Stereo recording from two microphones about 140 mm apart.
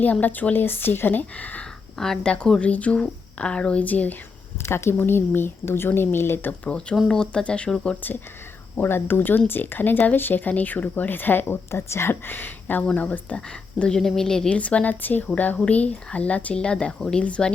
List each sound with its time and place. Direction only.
0.0 s speech: 10° left (ahead or behind)